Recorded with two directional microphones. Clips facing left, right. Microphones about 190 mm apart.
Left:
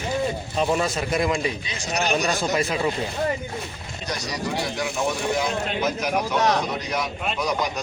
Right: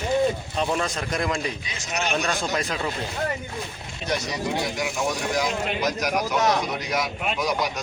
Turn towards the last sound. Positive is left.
turn(degrees=0)  # may be behind; listen again after turning